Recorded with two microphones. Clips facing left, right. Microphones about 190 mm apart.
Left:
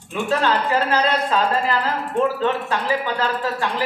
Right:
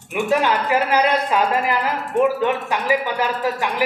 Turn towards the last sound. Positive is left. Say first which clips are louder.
# right 2 dB
turn(degrees=-15)  # may be behind; listen again after turning